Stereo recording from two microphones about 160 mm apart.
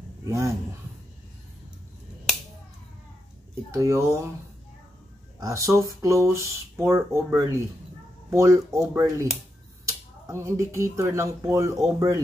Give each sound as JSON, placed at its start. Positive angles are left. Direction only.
{"t": 3.7, "sound": "speech", "side_deg": -20}
{"t": 5.4, "sound": "speech", "side_deg": -20}